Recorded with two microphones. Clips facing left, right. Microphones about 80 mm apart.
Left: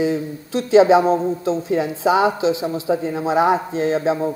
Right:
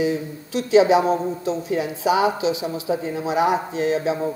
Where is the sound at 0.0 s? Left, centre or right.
Left.